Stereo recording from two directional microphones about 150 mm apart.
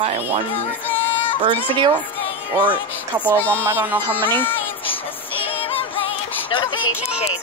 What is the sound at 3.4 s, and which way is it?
Speech, 10° left (ahead or behind).